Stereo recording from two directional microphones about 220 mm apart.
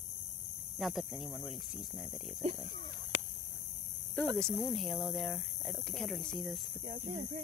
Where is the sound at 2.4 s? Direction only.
30° right (ahead or behind).